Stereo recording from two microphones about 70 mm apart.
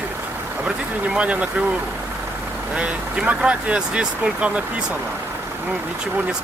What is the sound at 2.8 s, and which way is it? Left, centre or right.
Speech, centre.